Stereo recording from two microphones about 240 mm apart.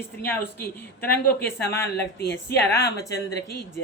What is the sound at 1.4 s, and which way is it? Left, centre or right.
Speech, centre.